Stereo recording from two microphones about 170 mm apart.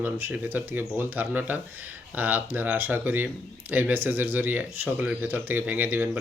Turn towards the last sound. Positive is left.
turn(degrees=-10)  # may be behind; listen again after turning